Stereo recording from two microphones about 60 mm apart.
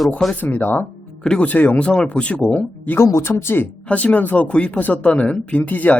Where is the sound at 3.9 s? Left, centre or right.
Left.